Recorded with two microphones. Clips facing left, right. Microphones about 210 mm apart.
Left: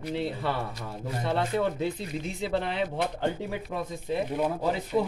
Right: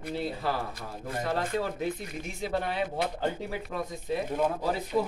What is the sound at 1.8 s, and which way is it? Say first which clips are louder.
Speech: left 2 dB; 30° left (ahead or behind).